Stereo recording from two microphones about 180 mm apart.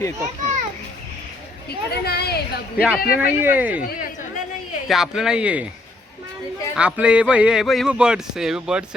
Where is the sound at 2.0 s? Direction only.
60° left (ahead or behind).